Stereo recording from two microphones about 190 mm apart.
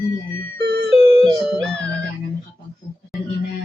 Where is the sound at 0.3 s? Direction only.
60° right (ahead or behind).